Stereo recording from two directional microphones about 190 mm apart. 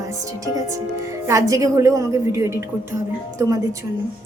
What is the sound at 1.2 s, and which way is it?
A woman's voice, 15° right (ahead or behind).